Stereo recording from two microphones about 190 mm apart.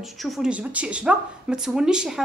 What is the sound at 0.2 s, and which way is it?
A woman's voice, centre (ahead or behind).